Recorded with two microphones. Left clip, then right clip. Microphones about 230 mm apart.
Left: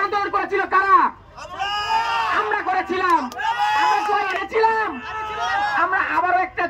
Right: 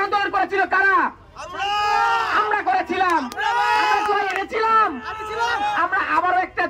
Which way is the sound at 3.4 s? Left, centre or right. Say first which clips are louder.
Right 2 dB; centre.